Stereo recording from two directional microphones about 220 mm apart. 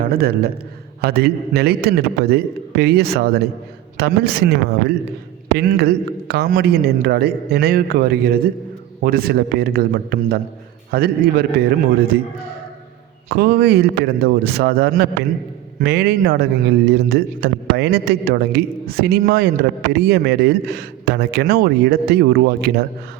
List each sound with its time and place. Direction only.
0.0 s a man's voice: 45° right (ahead or behind)
13.3 s a man's voice: 45° right (ahead or behind)